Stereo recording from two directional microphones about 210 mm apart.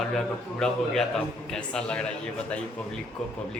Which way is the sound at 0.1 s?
Centre (ahead or behind).